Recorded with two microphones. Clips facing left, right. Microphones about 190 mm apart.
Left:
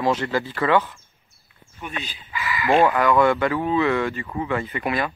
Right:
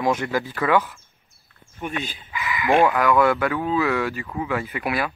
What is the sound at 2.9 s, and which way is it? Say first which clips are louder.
Speech: left 1 dB; 5° right (ahead or behind).